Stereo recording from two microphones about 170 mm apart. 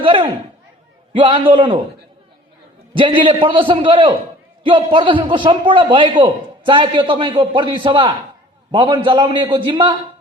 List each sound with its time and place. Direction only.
0.0 s a sound: 30° right (ahead or behind)
1.1 s a man's voice: 30° right (ahead or behind)
2.9 s a man's voice: 30° right (ahead or behind)